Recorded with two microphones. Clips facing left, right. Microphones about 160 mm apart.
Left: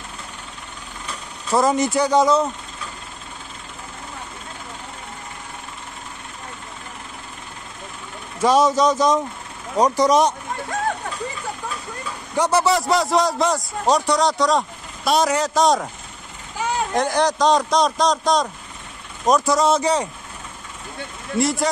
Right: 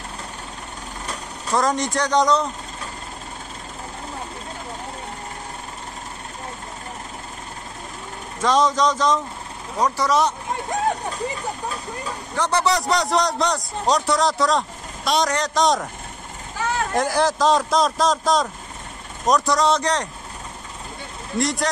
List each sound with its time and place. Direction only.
1.5 s a man's voice: 5° left (ahead or behind)
8.4 s speech: 10° left (ahead or behind)
12.4 s a man's voice: 5° left (ahead or behind)
16.5 s vehicle: 15° left (ahead or behind)
16.9 s a man's voice: 5° right (ahead or behind)
21.4 s a man's voice: 5° left (ahead or behind)